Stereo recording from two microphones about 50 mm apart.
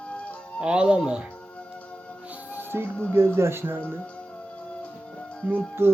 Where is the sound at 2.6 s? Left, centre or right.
Right.